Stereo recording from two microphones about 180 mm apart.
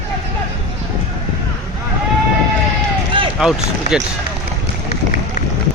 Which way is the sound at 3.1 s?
30° right (ahead or behind).